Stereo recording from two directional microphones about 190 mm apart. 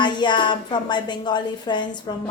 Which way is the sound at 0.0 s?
25° left (ahead or behind).